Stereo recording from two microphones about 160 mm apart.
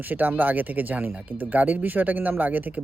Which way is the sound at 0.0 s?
10° right (ahead or behind).